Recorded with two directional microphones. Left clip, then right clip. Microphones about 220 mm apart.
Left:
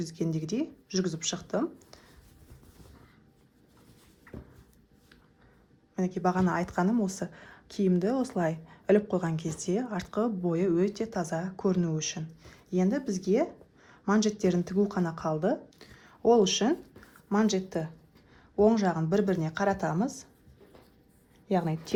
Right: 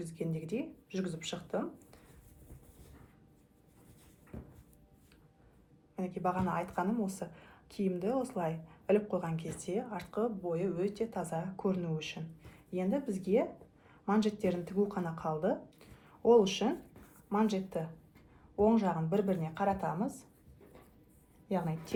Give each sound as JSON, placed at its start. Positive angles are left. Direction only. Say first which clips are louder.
{"t": 0.0, "sound": "speech", "louder": "left 7 dB", "side_deg": 45}
{"t": 6.0, "sound": "speech", "louder": "left 6 dB", "side_deg": 45}
{"t": 21.5, "sound": "speech", "louder": "left 7 dB", "side_deg": 50}